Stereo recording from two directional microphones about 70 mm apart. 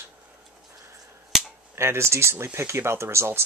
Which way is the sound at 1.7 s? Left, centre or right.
Right.